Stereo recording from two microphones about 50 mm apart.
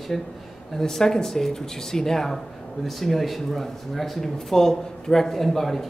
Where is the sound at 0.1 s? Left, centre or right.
Centre.